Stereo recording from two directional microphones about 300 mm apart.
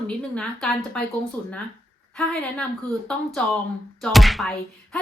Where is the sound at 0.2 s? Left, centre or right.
Centre.